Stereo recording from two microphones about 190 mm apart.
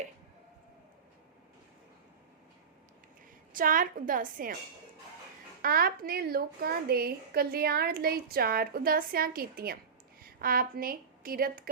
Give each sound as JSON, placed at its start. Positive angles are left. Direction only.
{"t": 3.5, "sound": "a woman's voice", "side_deg": -45}
{"t": 5.6, "sound": "a woman's voice", "side_deg": -50}